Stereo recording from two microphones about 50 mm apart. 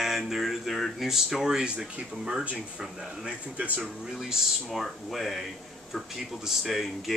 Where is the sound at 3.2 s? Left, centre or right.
Right.